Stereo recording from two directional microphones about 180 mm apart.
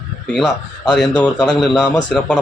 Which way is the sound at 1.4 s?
Centre (ahead or behind).